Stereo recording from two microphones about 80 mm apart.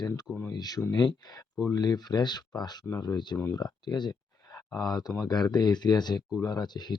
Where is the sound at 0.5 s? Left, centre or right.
Left.